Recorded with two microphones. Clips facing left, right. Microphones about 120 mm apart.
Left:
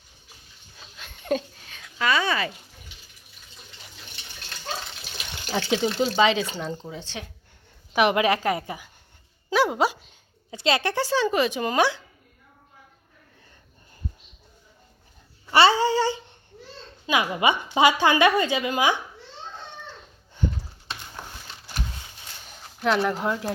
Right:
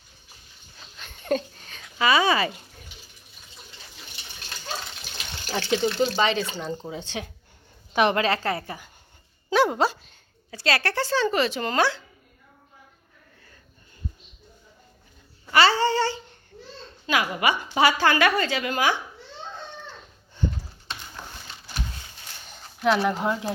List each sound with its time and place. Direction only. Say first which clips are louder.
0.8 s a sound: even; centre (ahead or behind)
2.0 s speech: right 3 dB; 10° right (ahead or behind)
5.1 s water: left 2 dB; 15° left (ahead or behind)
6.1 s speech: left 3 dB; 5° left (ahead or behind)
6.9 s speech: right 3 dB; 15° right (ahead or behind)
7.9 s speech: left 1 dB; 10° left (ahead or behind)
9.5 s speech: right 1 dB; 5° left (ahead or behind)
15.7 s a woman's voice: left 1 dB; 10° left (ahead or behind)
22.4 s a sound: right 1 dB; 5° left (ahead or behind)
22.9 s speech: right 1 dB; 5° right (ahead or behind)